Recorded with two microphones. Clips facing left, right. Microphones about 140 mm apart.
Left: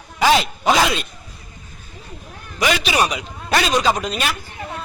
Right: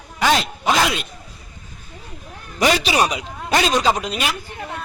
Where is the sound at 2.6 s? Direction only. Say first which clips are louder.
Right 2 dB; 35° right (ahead or behind).